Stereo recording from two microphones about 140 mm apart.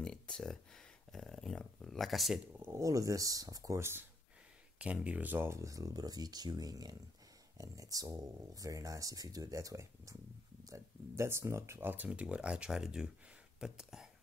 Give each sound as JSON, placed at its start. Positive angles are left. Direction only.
{"t": 0.0, "sound": "speech", "side_deg": 5}
{"t": 2.6, "sound": "speech", "side_deg": -20}
{"t": 4.7, "sound": "speech", "side_deg": -10}